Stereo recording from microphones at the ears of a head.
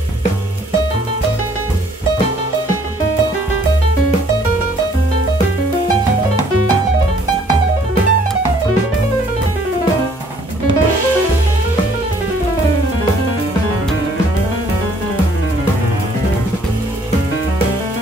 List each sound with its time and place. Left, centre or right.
6.9 s music: right